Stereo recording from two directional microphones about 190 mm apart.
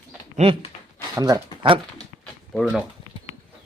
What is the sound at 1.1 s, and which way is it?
Speech, 20° right (ahead or behind).